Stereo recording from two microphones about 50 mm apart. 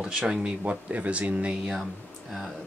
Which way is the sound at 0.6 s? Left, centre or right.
Right.